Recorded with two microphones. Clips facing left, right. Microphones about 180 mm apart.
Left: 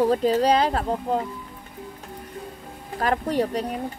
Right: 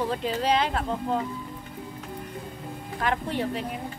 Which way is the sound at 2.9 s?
40° left (ahead or behind).